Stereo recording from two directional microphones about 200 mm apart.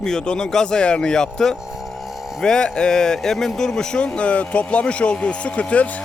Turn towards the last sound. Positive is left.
turn(degrees=5)  # may be behind; listen again after turning